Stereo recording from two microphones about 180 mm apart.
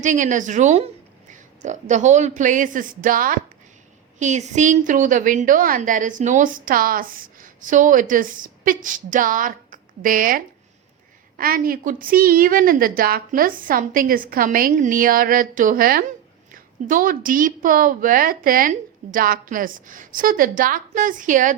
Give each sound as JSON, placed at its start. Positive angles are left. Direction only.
{"t": 0.0, "sound": "a woman's voice", "side_deg": -45}